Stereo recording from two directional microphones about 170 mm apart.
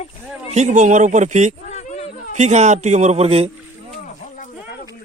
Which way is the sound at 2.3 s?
40° right (ahead or behind).